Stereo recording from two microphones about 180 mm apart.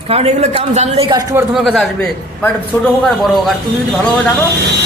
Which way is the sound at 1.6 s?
Centre (ahead or behind).